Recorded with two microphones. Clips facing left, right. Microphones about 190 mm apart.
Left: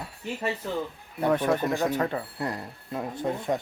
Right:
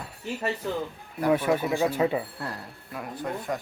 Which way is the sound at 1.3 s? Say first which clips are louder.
Right 1 dB; 10° right (ahead or behind).